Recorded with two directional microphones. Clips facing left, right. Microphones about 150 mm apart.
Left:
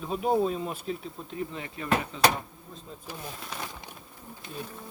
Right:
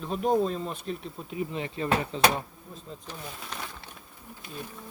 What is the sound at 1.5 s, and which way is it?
Speech, 25° right (ahead or behind).